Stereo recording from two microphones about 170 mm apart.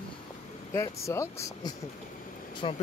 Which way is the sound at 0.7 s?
15° left (ahead or behind).